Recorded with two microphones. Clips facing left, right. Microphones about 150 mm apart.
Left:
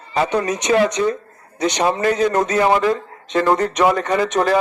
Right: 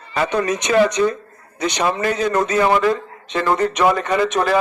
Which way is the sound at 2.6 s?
25° left (ahead or behind).